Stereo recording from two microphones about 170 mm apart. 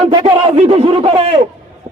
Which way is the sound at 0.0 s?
25° right (ahead or behind).